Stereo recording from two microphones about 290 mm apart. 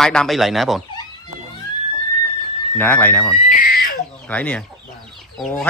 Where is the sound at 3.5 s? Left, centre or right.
Left.